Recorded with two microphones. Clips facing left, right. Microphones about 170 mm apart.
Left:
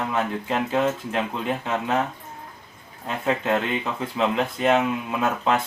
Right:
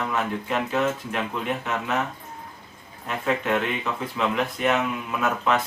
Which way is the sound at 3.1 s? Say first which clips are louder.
Left 1 dB; 30° left (ahead or behind).